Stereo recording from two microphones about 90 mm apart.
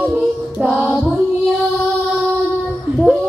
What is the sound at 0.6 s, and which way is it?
Music, 15° right (ahead or behind).